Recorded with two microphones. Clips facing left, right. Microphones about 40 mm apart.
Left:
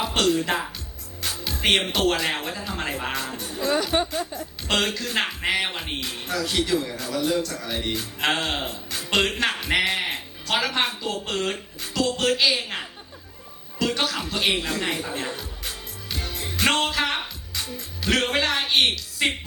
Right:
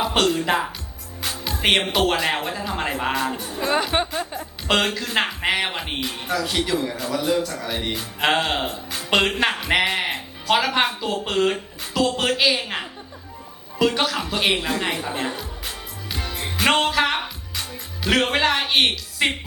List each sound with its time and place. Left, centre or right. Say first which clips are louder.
0.0 s music: right 4 dB; centre
0.3 s speech: right 3 dB; centre
1.3 s music: right 2 dB; centre
1.6 s speech: right 2 dB; centre
3.4 s speech: right 2 dB; right
4.7 s speech: right 3 dB; centre
9.7 s music: right 2 dB; centre
10.8 s speech: right 4 dB; centre
16.1 s music: right 2 dB; right
16.8 s music: right 4 dB; centre
18.0 s speech: right 3 dB; centre